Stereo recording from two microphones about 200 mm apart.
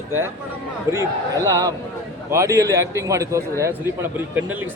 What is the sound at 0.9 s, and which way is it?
Speech, 15° right (ahead or behind).